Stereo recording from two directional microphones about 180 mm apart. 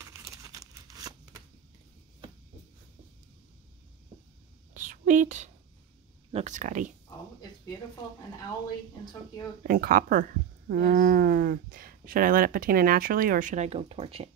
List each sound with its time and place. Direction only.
0.0 s crumpling: 15° right (ahead or behind)
4.7 s a sound: 45° right (ahead or behind)
6.3 s speech: 45° right (ahead or behind)
9.6 s speech: 50° right (ahead or behind); by 14.3 s 35° right (ahead or behind)